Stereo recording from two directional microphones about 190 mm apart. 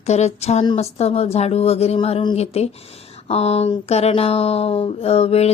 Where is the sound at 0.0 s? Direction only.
35° left (ahead or behind).